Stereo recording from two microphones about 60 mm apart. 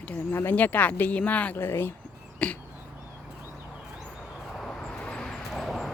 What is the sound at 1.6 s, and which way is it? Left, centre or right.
Speech, left.